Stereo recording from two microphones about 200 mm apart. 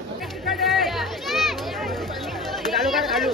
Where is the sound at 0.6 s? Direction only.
Centre (ahead or behind).